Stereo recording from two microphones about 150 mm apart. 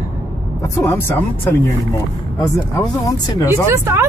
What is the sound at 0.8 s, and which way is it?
Speech, 15° left (ahead or behind).